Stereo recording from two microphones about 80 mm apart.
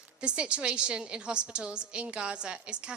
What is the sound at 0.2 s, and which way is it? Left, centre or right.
A woman's voice, centre.